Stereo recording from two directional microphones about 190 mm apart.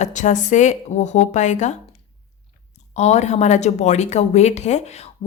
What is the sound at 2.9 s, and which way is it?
A woman's voice, 35° left (ahead or behind).